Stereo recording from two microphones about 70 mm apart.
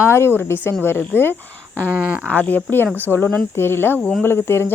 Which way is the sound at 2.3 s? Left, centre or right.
Left.